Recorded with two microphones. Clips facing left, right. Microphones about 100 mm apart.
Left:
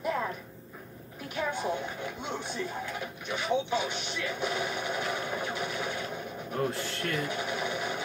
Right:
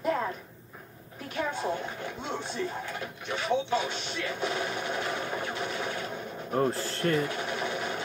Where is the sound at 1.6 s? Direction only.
15° left (ahead or behind).